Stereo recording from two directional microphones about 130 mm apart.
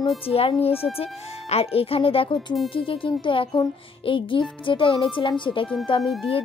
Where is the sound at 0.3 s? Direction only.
50° left (ahead or behind).